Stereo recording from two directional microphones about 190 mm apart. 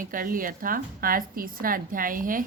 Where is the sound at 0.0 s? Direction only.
45° right (ahead or behind).